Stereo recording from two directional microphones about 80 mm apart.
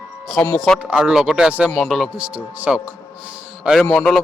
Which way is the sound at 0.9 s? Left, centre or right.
Centre.